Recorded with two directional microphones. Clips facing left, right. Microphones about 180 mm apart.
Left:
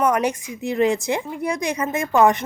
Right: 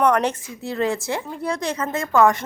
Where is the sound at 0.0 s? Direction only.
10° left (ahead or behind).